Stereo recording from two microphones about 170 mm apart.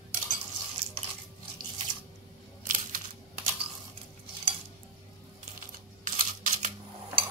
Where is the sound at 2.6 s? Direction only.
50° right (ahead or behind).